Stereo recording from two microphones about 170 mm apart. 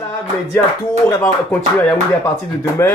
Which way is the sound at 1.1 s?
15° left (ahead or behind).